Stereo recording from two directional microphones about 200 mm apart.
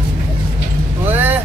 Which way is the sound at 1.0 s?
10° right (ahead or behind).